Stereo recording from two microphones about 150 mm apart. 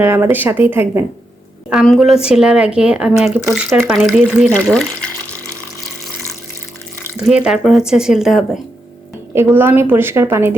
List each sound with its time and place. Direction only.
0.0 s a woman's voice: 15° right (ahead or behind)
1.7 s speech: centre (ahead or behind)
7.2 s speech: 5° right (ahead or behind)
9.3 s a woman's voice: 15° right (ahead or behind)